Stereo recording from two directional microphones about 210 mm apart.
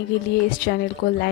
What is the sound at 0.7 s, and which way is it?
Speech, 45° left (ahead or behind).